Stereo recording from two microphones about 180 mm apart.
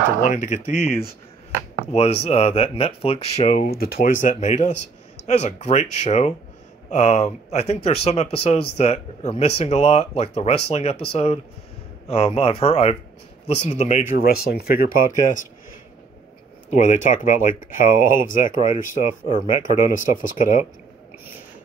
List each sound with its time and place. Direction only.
0.2 s speech: 45° left (ahead or behind)
3.5 s speech: 55° left (ahead or behind)
16.7 s speech: 45° left (ahead or behind)